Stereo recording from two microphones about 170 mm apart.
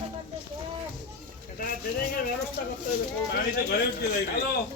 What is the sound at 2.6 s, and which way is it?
Speech, 65° left (ahead or behind).